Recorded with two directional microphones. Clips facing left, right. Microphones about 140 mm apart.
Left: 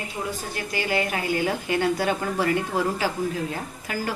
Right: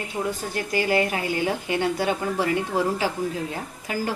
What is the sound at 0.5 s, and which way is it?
A woman's voice, 35° right (ahead or behind).